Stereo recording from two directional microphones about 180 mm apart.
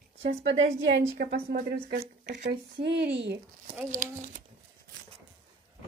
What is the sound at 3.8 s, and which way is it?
Speech, 45° right (ahead or behind).